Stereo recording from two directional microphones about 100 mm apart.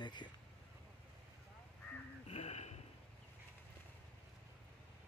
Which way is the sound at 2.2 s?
90° left.